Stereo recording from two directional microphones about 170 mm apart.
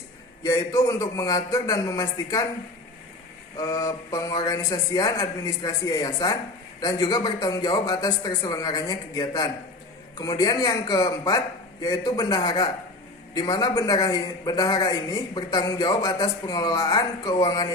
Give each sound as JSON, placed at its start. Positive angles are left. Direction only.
{"t": 0.4, "sound": "a man's voice", "side_deg": 20}
{"t": 3.6, "sound": "a man's voice", "side_deg": 20}